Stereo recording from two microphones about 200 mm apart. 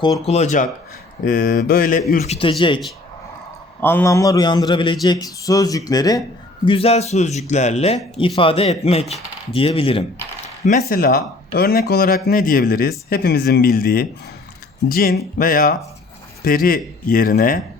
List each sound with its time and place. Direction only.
0.3 s a man's voice: 35° left (ahead or behind)
2.2 s speech: 30° left (ahead or behind)
3.8 s a man's voice: 10° left (ahead or behind)
6.7 s speech: 30° left (ahead or behind)
10.7 s a man's voice: 45° left (ahead or behind)